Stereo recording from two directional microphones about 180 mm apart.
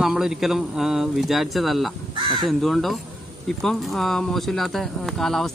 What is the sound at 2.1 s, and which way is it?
Crow, 30° right (ahead or behind).